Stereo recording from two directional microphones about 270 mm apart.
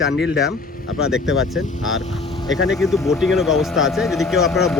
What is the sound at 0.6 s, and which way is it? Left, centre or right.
Speech, left.